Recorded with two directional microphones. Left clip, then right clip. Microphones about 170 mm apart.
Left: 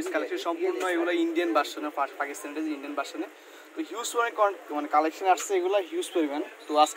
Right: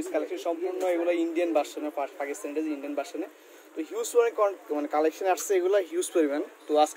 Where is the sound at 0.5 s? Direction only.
45° right (ahead or behind).